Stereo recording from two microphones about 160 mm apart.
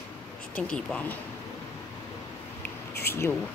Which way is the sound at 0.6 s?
5° left (ahead or behind).